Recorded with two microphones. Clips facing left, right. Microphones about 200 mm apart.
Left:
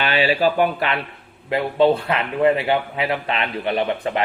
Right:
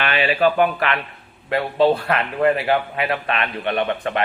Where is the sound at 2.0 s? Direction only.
25° left (ahead or behind).